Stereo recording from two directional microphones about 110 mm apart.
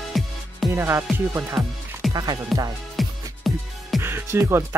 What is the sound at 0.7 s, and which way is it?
Music, 25° right (ahead or behind).